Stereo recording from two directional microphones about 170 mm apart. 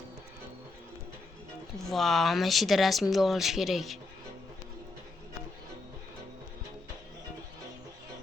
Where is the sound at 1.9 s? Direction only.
Centre (ahead or behind).